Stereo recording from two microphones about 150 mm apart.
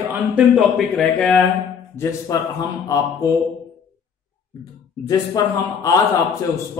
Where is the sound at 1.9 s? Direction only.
20° left (ahead or behind).